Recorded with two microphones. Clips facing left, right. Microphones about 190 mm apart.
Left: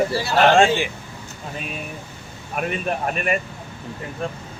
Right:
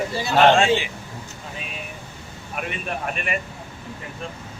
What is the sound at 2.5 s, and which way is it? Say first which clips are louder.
Speech: left 5 dB; 40° left (ahead or behind).